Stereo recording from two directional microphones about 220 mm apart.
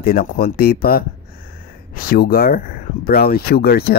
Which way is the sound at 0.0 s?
40° left (ahead or behind).